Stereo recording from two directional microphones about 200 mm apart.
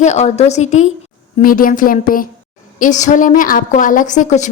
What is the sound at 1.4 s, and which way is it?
A woman's voice, 45° left (ahead or behind).